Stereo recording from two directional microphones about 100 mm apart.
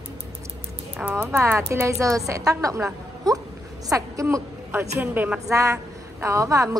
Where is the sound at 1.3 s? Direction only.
25° right (ahead or behind).